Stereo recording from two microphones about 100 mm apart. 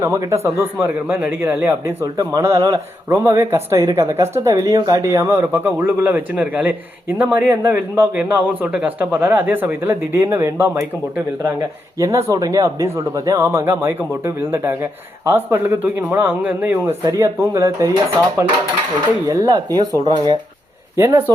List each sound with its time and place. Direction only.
0.0 s speech: 30° right (ahead or behind)
1.0 s a man's voice: 10° right (ahead or behind); by 10.8 s 30° right (ahead or behind)
11.9 s speech: 35° right (ahead or behind)
17.1 s speech: 30° right (ahead or behind)
19.4 s speech: 45° right (ahead or behind)
20.9 s speech: 25° right (ahead or behind)